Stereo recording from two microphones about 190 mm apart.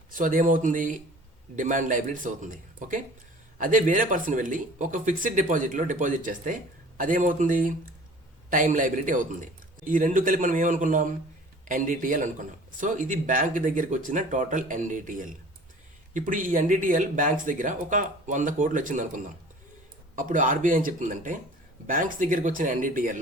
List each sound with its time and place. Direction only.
0.1 s speech: 45° right (ahead or behind)